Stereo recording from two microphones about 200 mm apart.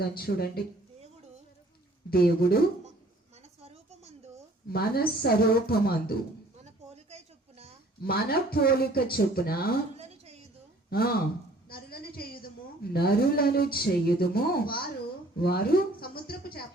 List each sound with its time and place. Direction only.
0.0 s speech: 50° left (ahead or behind)
2.0 s speech: 50° left (ahead or behind)
3.6 s a sound: 30° right (ahead or behind)
4.7 s speech: 50° left (ahead or behind)
8.0 s speech: 50° left (ahead or behind)
10.0 s a sound: 30° right (ahead or behind)
10.8 s a woman's voice: 50° left (ahead or behind)